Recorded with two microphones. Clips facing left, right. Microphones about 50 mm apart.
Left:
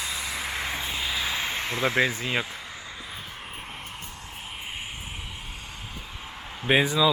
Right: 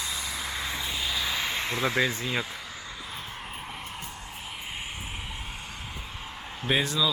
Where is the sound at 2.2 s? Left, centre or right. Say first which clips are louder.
Left 2 dB; left.